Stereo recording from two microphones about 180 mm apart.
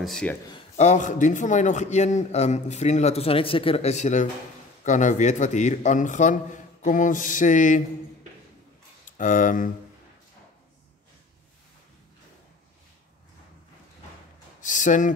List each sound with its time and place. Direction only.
0.0 s speech: 5° left (ahead or behind)
0.7 s a man's voice: 40° left (ahead or behind)
9.0 s speech: 45° left (ahead or behind)
14.6 s a man's voice: 45° left (ahead or behind)